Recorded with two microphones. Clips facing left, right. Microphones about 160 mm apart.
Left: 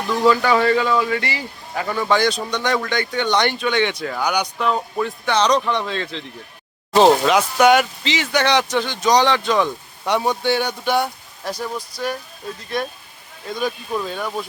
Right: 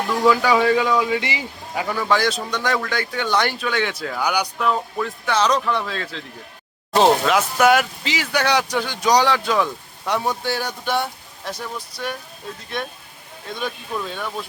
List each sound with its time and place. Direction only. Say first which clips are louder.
0.3 s speech: left 1 dB; 10° right (ahead or behind)
11.9 s speech: left 3 dB; 30° right (ahead or behind)
13.5 s speech: left 4 dB; 5° left (ahead or behind)